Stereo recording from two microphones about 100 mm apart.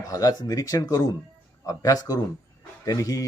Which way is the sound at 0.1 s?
35° left (ahead or behind).